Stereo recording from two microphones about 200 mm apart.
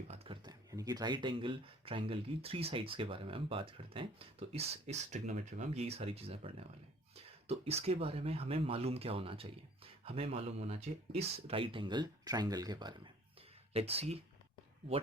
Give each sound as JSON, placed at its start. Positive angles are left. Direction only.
{"t": 0.1, "sound": "speech", "side_deg": -25}
{"t": 13.7, "sound": "speech", "side_deg": -30}